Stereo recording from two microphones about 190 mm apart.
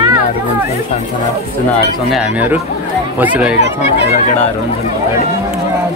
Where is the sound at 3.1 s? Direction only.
5° right (ahead or behind).